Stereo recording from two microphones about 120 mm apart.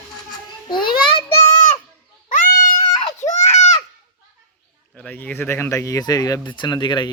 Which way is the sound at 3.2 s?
80° left.